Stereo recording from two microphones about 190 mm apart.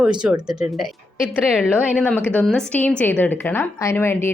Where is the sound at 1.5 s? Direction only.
5° right (ahead or behind).